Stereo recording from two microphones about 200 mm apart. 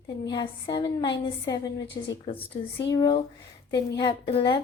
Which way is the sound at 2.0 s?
35° left (ahead or behind).